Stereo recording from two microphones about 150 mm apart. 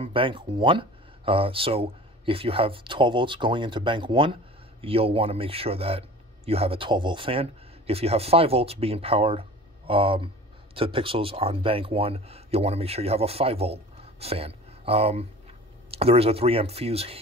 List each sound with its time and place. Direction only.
0.0 s a man's voice: 35° right (ahead or behind)